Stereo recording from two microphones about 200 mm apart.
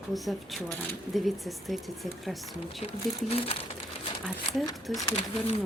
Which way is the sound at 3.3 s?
30° left (ahead or behind).